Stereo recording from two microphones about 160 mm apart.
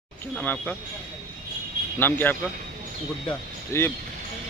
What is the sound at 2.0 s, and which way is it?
Speech, 10° left (ahead or behind).